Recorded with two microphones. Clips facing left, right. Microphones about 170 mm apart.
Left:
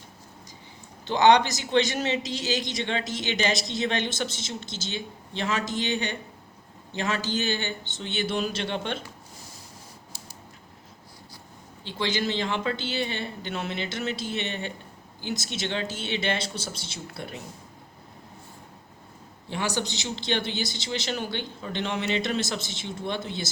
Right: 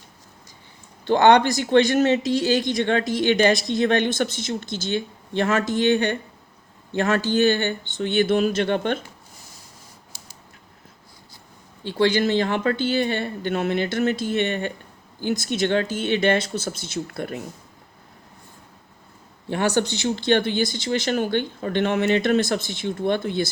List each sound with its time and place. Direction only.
1.0 s a man's voice: 55° right (ahead or behind)
11.8 s speech: 50° right (ahead or behind)
19.5 s speech: 55° right (ahead or behind)